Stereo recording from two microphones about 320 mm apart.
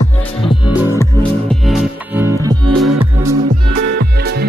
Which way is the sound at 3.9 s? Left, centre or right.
Right.